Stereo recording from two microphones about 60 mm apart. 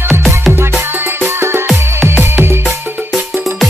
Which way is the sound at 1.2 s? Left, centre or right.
Right.